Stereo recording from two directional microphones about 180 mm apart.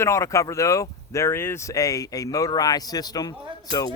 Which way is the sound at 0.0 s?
15° left (ahead or behind).